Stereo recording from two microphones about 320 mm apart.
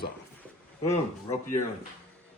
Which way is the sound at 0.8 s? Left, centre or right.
Centre.